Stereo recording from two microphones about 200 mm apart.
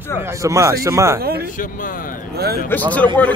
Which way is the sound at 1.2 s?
50° right (ahead or behind).